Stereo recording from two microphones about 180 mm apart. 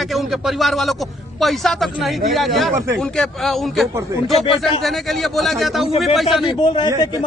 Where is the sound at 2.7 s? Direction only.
15° right (ahead or behind).